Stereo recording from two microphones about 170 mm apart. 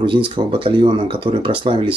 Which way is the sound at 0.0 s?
30° right (ahead or behind).